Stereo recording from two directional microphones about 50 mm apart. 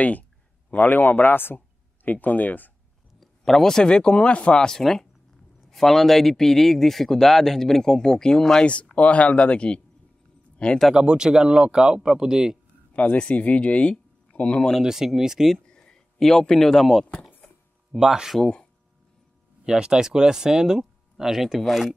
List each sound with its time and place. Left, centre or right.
0.0 s speech: left
3.2 s speech: centre; by 4.6 s left
4.6 s speech: centre
8.9 s speech: left
10.9 s speech: centre
12.9 s speech: left
14.8 s speech: centre
15.5 s speech: centre
17.9 s speech: centre
18.4 s speech: centre
19.6 s speech: centre